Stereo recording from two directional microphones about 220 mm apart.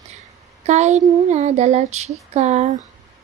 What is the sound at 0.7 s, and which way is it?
Speech, 30° right (ahead or behind).